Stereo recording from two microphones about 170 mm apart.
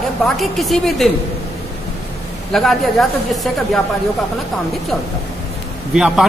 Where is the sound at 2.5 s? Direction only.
Centre (ahead or behind).